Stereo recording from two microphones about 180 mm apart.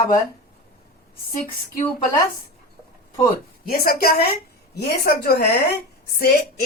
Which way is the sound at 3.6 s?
55° left (ahead or behind).